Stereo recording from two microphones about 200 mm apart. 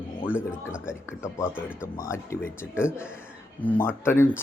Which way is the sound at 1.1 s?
10° left (ahead or behind).